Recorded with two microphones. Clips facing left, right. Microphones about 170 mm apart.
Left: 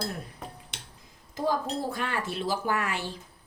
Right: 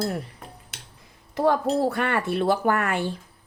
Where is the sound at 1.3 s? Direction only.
65° right (ahead or behind).